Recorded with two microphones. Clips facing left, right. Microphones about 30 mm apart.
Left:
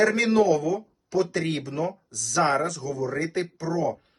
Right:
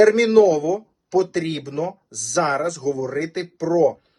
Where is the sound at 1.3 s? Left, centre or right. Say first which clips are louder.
Right 3 dB; right.